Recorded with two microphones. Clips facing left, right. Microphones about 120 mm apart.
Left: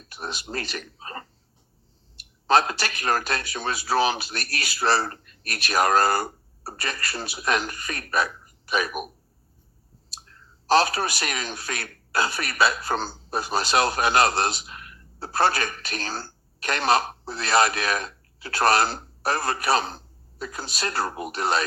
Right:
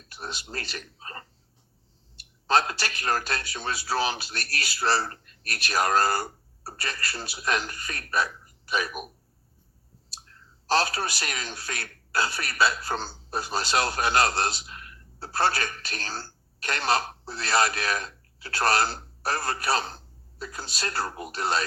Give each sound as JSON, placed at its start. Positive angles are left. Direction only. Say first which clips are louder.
{"t": 0.1, "sound": "a man's voice", "louder": "left 4 dB", "side_deg": 15}
{"t": 10.7, "sound": "a man's voice", "louder": "left 5 dB", "side_deg": 15}